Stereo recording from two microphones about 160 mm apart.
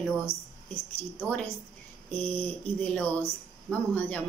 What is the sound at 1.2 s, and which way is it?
A woman's voice, 10° left (ahead or behind).